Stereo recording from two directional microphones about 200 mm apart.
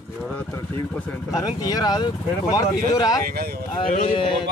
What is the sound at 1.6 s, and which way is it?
Speech, 20° left (ahead or behind).